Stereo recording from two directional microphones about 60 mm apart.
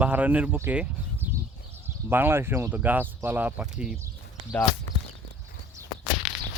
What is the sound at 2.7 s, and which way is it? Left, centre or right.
Speech, right.